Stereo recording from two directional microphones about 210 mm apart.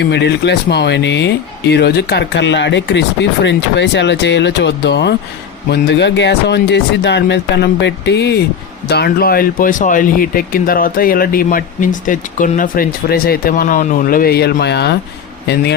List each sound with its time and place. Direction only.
0.0 s speech: 55° left (ahead or behind)